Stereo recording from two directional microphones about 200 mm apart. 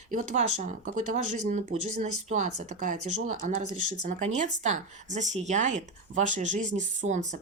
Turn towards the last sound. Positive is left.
turn(degrees=-35)  # may be behind; listen again after turning